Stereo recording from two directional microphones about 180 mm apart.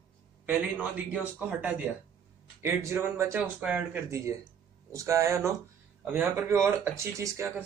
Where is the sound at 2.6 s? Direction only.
15° right (ahead or behind).